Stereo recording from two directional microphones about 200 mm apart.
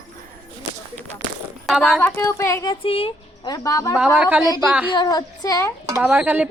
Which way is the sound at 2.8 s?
30° left (ahead or behind).